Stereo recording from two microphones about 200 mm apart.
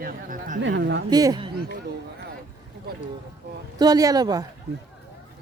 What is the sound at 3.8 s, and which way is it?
Speech, 20° right (ahead or behind).